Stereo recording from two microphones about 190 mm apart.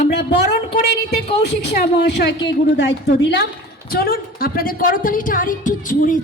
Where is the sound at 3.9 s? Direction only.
50° left (ahead or behind).